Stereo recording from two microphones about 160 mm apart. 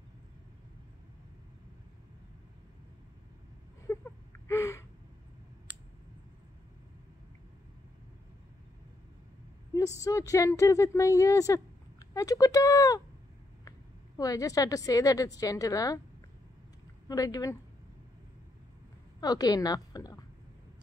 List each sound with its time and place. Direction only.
3.8 s a sound: 15° left (ahead or behind)
10.0 s a woman's voice: 20° left (ahead or behind)
17.1 s speech: 20° left (ahead or behind)
19.1 s speech: 25° left (ahead or behind)